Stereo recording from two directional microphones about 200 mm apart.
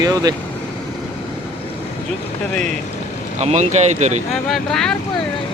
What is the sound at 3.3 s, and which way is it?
Speech, 35° right (ahead or behind).